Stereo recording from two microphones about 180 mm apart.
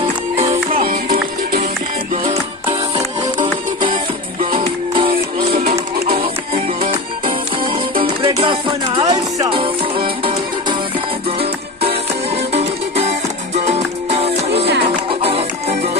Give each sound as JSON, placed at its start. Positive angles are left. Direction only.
{"t": 0.7, "sound": "music", "side_deg": -55}
{"t": 4.6, "sound": "music", "side_deg": -30}
{"t": 5.5, "sound": "music", "side_deg": -55}
{"t": 6.1, "sound": "music", "side_deg": -35}
{"t": 8.0, "sound": "music", "side_deg": -25}